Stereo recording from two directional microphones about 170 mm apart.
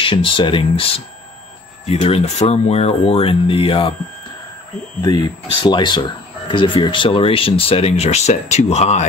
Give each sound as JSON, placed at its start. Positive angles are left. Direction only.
{"t": 0.0, "sound": "speech", "side_deg": 30}
{"t": 5.0, "sound": "speech", "side_deg": 25}